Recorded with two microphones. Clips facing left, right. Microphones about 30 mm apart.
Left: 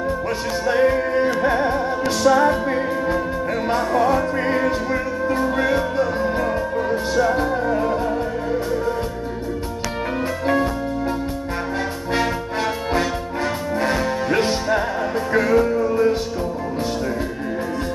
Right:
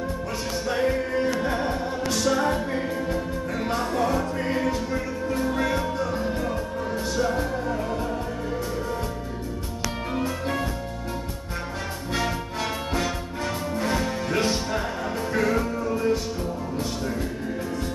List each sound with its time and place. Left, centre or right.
0.7 s music: centre
3.6 s music: centre
5.5 s music: left
13.7 s music: left